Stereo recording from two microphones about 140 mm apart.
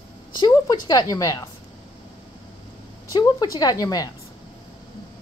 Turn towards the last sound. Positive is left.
turn(degrees=25)  # may be behind; listen again after turning